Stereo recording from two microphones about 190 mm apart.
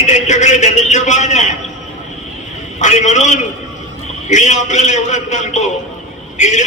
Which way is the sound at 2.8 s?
40° left (ahead or behind).